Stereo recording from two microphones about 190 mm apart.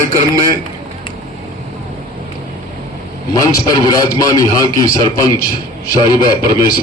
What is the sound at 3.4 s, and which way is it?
A man's voice, 20° left (ahead or behind).